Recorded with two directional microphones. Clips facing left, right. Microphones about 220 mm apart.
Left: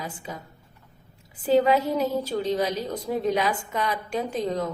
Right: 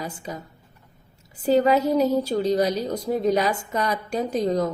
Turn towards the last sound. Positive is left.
turn(degrees=-40)  # may be behind; listen again after turning